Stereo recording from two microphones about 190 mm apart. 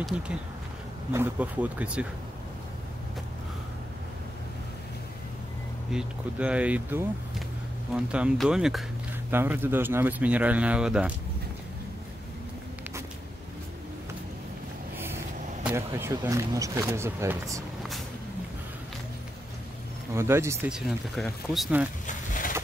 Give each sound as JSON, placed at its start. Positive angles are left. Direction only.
{"t": 0.1, "sound": "speech", "side_deg": -5}
{"t": 5.9, "sound": "speech", "side_deg": -5}
{"t": 15.0, "sound": "speech", "side_deg": -10}
{"t": 20.2, "sound": "speech", "side_deg": -15}
{"t": 20.7, "sound": "speech", "side_deg": 0}
{"t": 22.0, "sound": "a sound", "side_deg": 45}